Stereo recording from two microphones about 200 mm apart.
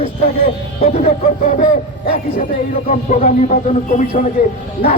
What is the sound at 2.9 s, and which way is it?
Speech, 40° left (ahead or behind).